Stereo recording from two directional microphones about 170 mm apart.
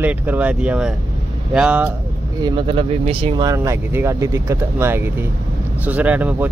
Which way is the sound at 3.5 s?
15° right (ahead or behind).